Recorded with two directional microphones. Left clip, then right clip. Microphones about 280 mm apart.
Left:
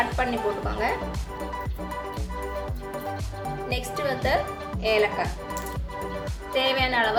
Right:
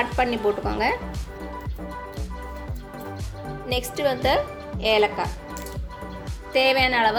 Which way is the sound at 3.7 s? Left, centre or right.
Right.